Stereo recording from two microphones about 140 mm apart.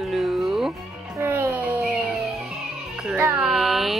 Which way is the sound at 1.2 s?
20° right (ahead or behind).